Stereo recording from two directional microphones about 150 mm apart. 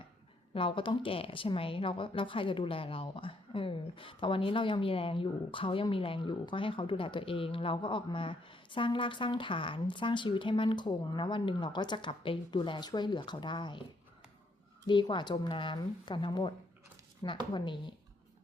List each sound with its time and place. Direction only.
0.5 s speech: 35° left (ahead or behind)
14.8 s speech: 30° left (ahead or behind)